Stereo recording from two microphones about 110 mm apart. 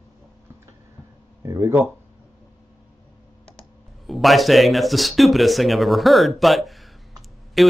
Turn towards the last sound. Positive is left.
turn(degrees=0)  # may be behind; listen again after turning